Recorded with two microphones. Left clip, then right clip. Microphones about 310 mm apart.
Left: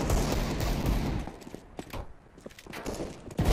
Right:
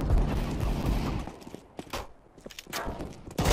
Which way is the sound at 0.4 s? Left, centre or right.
Centre.